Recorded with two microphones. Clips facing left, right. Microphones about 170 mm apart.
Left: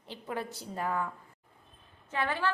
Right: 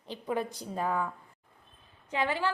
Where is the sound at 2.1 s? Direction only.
15° right (ahead or behind).